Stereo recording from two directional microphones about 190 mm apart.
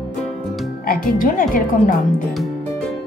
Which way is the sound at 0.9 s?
50° left (ahead or behind).